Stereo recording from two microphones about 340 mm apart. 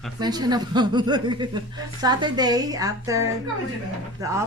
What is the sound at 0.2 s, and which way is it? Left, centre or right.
A woman's voice, centre.